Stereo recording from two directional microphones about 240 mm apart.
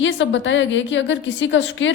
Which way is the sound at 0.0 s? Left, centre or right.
Left.